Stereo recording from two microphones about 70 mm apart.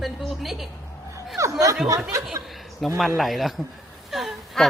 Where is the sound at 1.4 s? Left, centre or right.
Right.